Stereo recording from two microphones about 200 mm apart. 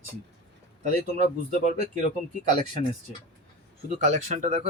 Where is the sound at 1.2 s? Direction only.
35° right (ahead or behind).